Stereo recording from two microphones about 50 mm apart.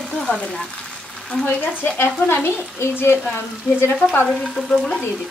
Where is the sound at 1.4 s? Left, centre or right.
Left.